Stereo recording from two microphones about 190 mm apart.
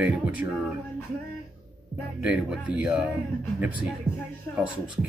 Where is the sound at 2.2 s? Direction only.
5° right (ahead or behind).